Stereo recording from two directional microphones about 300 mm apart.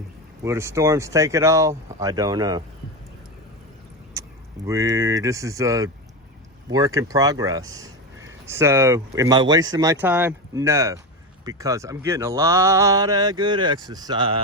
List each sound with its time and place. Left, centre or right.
0.4 s speech: centre
4.1 s speech: centre